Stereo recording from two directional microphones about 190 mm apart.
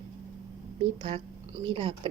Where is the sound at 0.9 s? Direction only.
30° right (ahead or behind).